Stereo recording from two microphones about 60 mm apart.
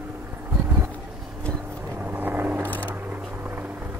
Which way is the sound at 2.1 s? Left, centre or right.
Right.